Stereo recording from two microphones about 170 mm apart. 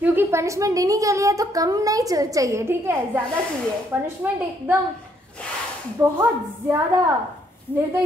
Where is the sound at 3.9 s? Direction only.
10° right (ahead or behind).